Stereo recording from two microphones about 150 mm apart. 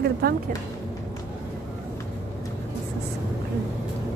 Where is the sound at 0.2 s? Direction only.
90° right.